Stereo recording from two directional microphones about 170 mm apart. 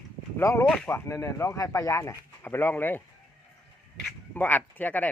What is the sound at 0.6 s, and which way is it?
Speech, 5° left (ahead or behind).